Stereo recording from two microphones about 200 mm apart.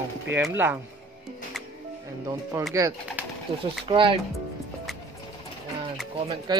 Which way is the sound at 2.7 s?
15° right (ahead or behind).